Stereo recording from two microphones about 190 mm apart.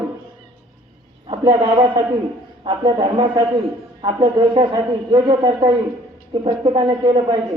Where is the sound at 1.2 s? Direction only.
25° right (ahead or behind).